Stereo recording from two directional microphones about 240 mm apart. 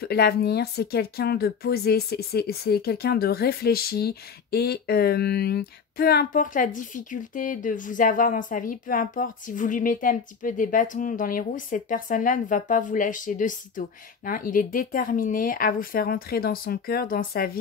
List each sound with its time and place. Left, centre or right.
0.0 s speech: left